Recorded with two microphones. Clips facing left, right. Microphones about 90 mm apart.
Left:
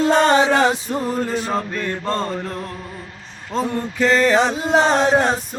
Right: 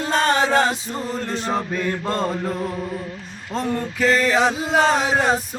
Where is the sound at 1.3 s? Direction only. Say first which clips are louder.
Left 1 dB; centre (ahead or behind).